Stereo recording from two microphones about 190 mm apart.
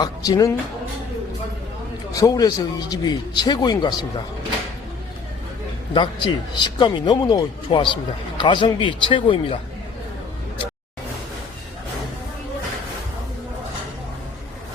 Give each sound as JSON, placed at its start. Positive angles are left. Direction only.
{"t": 0.0, "sound": "speech", "side_deg": 20}
{"t": 2.1, "sound": "a man's voice", "side_deg": 20}
{"t": 5.9, "sound": "a man's voice", "side_deg": 25}